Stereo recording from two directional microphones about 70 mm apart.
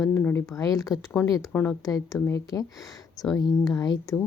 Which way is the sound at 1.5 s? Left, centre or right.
Left.